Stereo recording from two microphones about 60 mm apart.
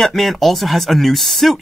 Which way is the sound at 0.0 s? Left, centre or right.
Centre.